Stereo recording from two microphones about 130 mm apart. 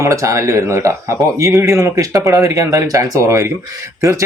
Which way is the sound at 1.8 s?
25° right (ahead or behind).